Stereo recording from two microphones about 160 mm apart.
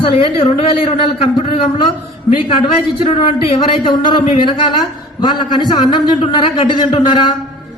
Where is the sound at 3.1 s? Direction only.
35° left (ahead or behind).